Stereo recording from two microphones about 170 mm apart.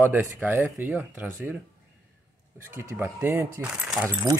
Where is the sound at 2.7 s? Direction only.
15° right (ahead or behind).